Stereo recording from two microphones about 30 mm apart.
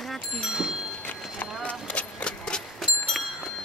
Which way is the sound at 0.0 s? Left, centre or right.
Centre.